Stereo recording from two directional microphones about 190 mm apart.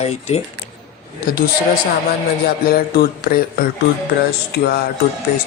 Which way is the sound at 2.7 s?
55° left (ahead or behind).